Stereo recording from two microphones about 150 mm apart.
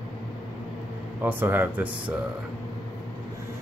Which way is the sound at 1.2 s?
15° right (ahead or behind).